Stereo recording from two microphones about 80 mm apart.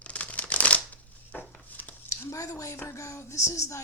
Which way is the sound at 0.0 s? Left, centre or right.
Centre.